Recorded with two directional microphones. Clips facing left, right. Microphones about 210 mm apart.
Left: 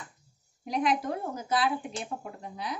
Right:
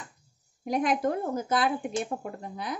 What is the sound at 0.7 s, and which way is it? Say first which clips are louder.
A woman's voice: right 2 dB; 50° right (ahead or behind).